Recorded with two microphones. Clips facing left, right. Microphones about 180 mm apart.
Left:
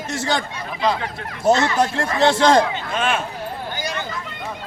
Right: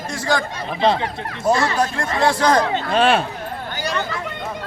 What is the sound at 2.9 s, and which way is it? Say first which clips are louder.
Speech: right 6 dB; 35° right (ahead or behind).